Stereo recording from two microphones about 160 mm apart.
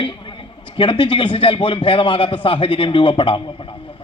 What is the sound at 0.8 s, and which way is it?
A man's voice, 30° left (ahead or behind).